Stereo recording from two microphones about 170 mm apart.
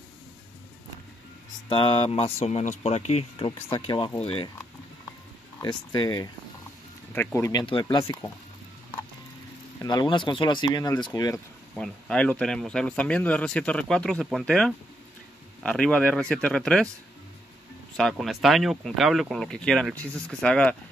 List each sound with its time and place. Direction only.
1.7 s speech: 30° left (ahead or behind)
5.6 s speech: 25° left (ahead or behind)
7.3 s speech: 20° left (ahead or behind)
7.6 s speech: 30° left (ahead or behind)
9.8 s speech: 25° left (ahead or behind)
11.7 s speech: 5° left (ahead or behind)
17.9 s speech: centre (ahead or behind)